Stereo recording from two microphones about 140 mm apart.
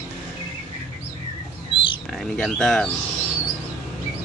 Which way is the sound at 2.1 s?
5° left (ahead or behind).